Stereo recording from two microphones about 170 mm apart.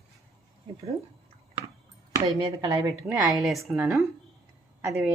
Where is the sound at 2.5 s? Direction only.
20° right (ahead or behind).